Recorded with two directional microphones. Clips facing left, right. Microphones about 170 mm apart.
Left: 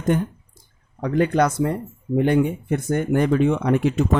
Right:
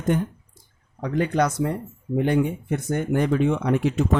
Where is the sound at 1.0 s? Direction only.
60° left (ahead or behind).